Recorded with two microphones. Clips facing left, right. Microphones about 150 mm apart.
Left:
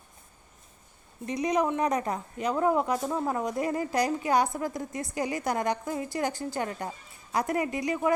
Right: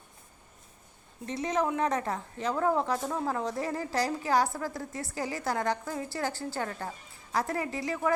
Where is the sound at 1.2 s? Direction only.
15° left (ahead or behind).